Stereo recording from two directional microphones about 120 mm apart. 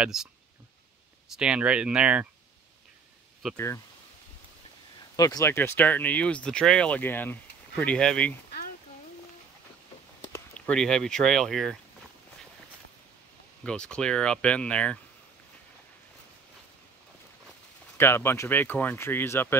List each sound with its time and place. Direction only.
0.0 s speech: 5° right (ahead or behind)
1.3 s speech: 10° right (ahead or behind)
3.5 s speech: 25° left (ahead or behind)
5.1 s speech: 30° left (ahead or behind); by 8.4 s 10° left (ahead or behind)
10.5 s speech: 5° left (ahead or behind)
13.7 s speech: 5° left (ahead or behind)
17.9 s speech: 20° left (ahead or behind)